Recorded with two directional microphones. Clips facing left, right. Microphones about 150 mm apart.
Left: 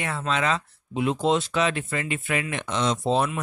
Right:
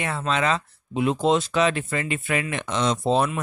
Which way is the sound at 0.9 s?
45° right (ahead or behind).